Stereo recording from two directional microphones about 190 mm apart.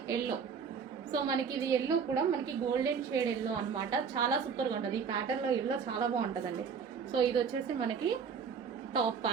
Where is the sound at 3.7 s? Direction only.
20° right (ahead or behind).